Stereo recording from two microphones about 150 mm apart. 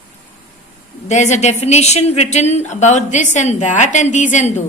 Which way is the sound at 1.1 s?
50° left (ahead or behind).